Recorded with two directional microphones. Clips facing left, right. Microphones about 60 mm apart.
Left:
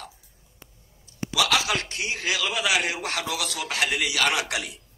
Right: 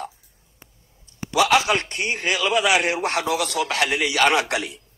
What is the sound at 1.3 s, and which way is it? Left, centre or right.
A man's voice, right.